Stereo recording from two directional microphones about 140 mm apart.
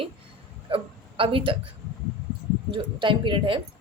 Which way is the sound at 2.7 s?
35° right (ahead or behind).